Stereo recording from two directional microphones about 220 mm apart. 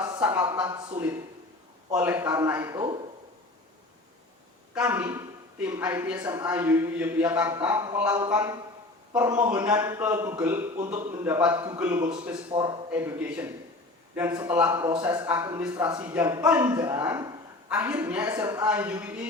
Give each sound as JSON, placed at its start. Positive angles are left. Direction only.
{"t": 0.3, "sound": "a man's voice", "side_deg": -15}
{"t": 4.7, "sound": "a man's voice", "side_deg": -5}
{"t": 12.5, "sound": "speech", "side_deg": -25}
{"t": 12.9, "sound": "a man's voice", "side_deg": -10}